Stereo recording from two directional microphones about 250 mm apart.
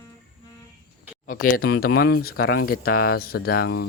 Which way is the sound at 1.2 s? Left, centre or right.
Left.